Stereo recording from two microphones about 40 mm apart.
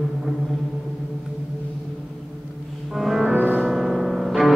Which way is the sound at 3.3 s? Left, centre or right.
Right.